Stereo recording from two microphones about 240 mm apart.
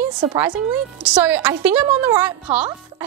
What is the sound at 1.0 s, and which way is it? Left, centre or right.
A woman's voice, centre.